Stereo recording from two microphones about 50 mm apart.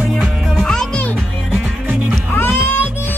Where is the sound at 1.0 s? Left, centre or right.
Left.